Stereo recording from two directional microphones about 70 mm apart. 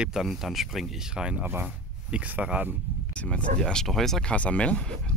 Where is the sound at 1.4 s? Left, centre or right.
Right.